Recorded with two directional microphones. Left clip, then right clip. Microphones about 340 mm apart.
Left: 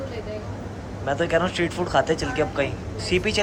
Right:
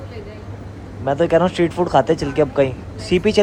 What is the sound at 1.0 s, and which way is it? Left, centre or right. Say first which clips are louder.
Speech: right 7 dB; centre.